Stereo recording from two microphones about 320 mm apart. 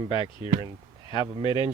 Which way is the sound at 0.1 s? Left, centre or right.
Centre.